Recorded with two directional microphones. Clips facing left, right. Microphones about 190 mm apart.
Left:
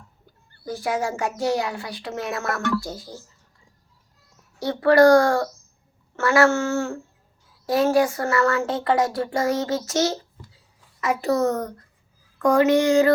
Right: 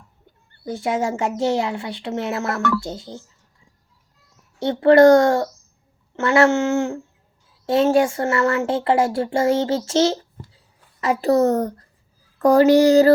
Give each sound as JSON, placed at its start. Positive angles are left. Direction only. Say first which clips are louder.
{"t": 0.6, "sound": "speech", "louder": "right 3 dB", "side_deg": -25}
{"t": 4.6, "sound": "speech", "louder": "right 4 dB", "side_deg": -25}
{"t": 10.3, "sound": "a sound", "louder": "right 5 dB", "side_deg": -50}
{"t": 11.0, "sound": "a child's voice", "louder": "right 4 dB", "side_deg": -35}